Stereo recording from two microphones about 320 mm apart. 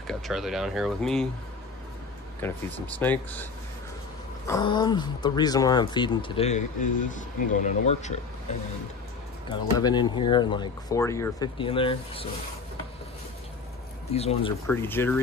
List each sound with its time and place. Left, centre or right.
0.0 s speech: centre
2.4 s speech: centre
4.5 s speech: centre
9.5 s speech: centre
14.1 s speech: centre
14.7 s speech: centre